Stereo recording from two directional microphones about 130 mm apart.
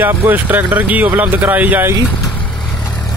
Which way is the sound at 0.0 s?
15° right (ahead or behind).